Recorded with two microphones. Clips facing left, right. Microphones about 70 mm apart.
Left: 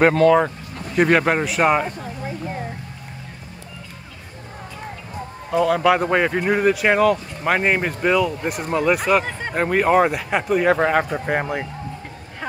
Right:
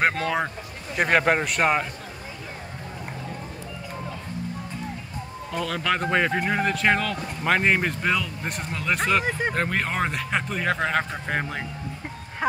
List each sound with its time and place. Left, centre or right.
0.0 s a man's voice: centre
5.9 s speech: centre